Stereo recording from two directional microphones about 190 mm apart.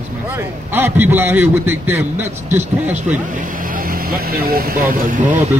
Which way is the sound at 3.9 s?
50° right (ahead or behind).